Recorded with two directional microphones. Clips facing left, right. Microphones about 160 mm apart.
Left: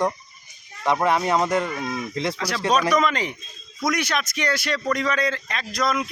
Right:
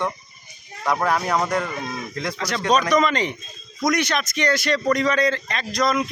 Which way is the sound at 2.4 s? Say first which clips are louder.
Right 2 dB; 5° left (ahead or behind).